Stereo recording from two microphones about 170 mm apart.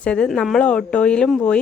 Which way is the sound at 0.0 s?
5° left (ahead or behind).